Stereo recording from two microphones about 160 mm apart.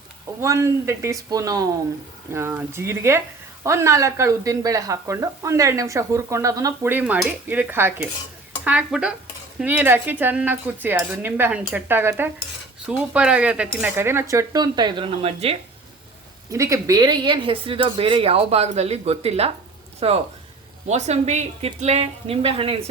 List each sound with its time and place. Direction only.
0.4 s speech: 20° right (ahead or behind); by 15.5 s 35° right (ahead or behind)
16.5 s speech: 20° right (ahead or behind); by 22.8 s 35° right (ahead or behind)